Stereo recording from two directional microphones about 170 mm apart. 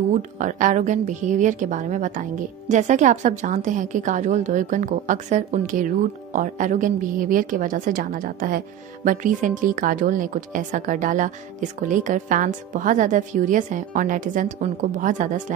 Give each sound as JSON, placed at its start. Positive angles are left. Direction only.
{"t": 0.1, "sound": "a woman's voice", "side_deg": -50}